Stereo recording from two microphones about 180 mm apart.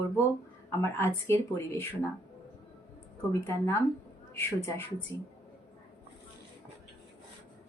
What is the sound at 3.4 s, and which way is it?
Speech, 15° left (ahead or behind).